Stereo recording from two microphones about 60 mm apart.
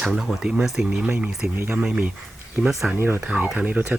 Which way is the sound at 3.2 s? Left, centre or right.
Centre.